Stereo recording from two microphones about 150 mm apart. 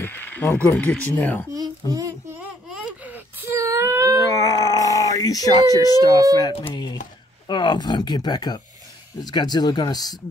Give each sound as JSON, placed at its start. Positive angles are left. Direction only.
{"t": 0.0, "sound": "a sound", "side_deg": 15}
{"t": 0.7, "sound": "speech", "side_deg": 10}
{"t": 1.5, "sound": "a child's voice", "side_deg": -25}
{"t": 3.4, "sound": "whimper", "side_deg": -20}
{"t": 4.3, "sound": "a sound", "side_deg": 25}
{"t": 6.7, "sound": "speech", "side_deg": 30}